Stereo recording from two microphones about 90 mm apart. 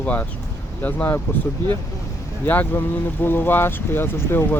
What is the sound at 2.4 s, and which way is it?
Speech, 20° left (ahead or behind).